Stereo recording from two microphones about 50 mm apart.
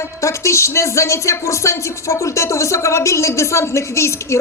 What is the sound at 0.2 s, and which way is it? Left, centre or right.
A woman's voice, left.